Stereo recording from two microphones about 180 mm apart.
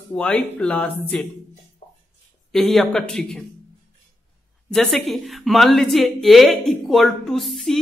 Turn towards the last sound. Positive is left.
turn(degrees=0)  # may be behind; listen again after turning